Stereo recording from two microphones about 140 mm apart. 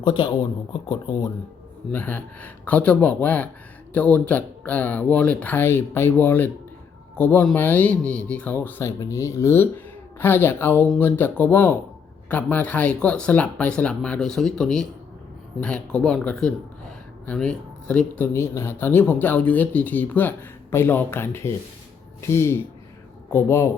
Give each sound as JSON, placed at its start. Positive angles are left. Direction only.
{"t": 0.0, "sound": "speech", "side_deg": 35}
{"t": 1.9, "sound": "speech", "side_deg": 15}